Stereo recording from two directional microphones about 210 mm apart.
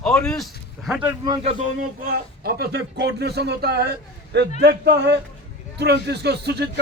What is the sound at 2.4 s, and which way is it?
A man's voice, 50° right (ahead or behind).